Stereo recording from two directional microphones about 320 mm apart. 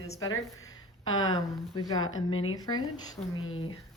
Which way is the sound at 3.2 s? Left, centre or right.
Centre.